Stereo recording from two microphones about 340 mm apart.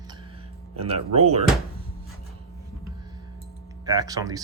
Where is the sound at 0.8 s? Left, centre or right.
Centre.